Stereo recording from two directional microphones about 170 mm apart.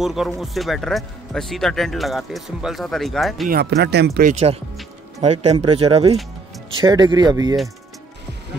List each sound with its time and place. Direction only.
0.0 s speech: centre (ahead or behind)
3.4 s speech: 70° right (ahead or behind)
4.3 s speech: 35° right (ahead or behind)
6.8 s speech: 25° right (ahead or behind)